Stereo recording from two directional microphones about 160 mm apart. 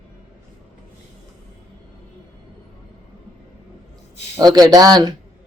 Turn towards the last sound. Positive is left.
turn(degrees=-25)  # may be behind; listen again after turning